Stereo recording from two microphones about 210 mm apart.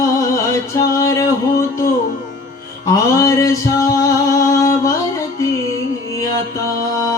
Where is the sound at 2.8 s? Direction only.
15° left (ahead or behind).